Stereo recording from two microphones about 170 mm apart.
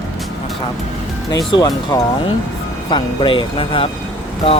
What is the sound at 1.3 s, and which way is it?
Speech, 20° left (ahead or behind).